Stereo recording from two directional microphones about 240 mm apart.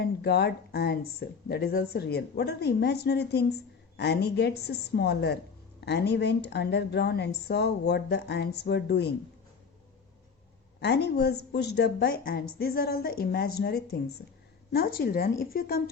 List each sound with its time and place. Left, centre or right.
0.0 s speech: left
10.8 s a woman's voice: left